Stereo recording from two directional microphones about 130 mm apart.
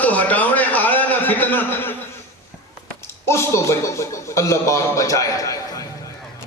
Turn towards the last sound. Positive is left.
turn(degrees=25)  # may be behind; listen again after turning